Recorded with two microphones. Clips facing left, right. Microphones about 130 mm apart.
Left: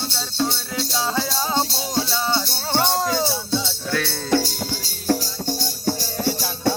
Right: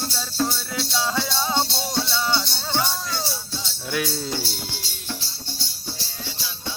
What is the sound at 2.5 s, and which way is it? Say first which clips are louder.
Music: left 4 dB; 50° left (ahead or behind).